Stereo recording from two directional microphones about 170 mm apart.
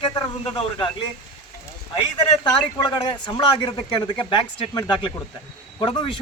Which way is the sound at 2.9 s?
25° left (ahead or behind).